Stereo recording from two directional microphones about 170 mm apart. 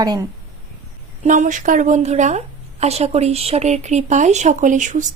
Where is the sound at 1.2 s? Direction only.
50° right (ahead or behind).